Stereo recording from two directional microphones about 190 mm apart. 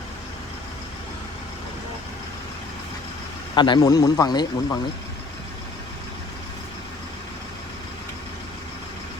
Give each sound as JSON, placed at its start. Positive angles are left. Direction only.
{"t": 3.5, "sound": "speech", "side_deg": 25}